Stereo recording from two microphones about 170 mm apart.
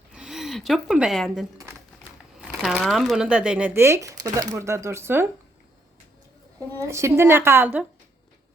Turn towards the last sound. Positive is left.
turn(degrees=-10)  # may be behind; listen again after turning